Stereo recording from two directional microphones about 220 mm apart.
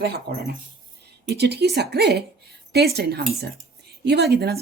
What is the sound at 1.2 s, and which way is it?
A woman's voice, 50° right (ahead or behind).